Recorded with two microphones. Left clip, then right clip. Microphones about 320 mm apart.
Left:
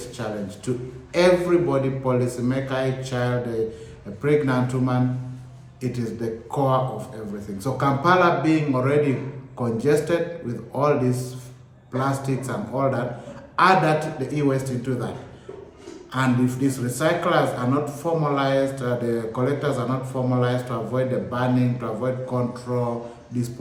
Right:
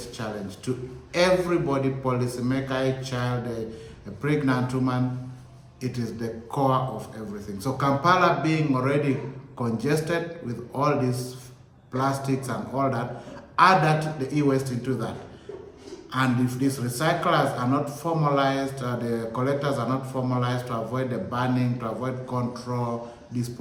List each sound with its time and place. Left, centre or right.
0.2 s a man's voice: centre
16.1 s a man's voice: centre